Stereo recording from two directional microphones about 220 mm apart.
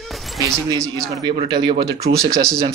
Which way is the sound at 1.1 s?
20° right (ahead or behind).